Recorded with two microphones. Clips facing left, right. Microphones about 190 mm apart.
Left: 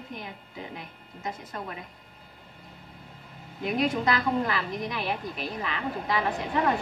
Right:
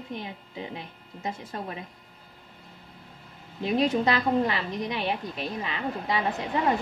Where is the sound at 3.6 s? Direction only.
30° right (ahead or behind).